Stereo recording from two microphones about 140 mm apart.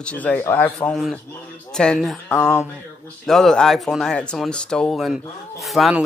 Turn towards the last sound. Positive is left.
turn(degrees=0)  # may be behind; listen again after turning